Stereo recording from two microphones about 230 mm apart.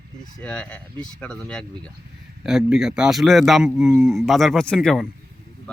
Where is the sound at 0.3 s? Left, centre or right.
Centre.